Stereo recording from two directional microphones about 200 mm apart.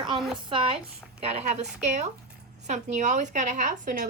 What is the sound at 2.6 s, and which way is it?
Speech, 35° right (ahead or behind).